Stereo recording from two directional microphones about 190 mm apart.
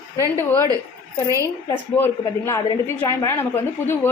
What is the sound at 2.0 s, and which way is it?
A woman's voice, 15° left (ahead or behind).